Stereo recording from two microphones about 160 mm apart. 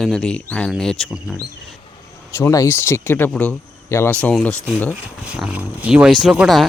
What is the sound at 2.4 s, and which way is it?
Speech, 20° left (ahead or behind).